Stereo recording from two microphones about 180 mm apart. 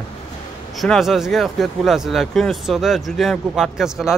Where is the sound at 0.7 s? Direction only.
Centre (ahead or behind).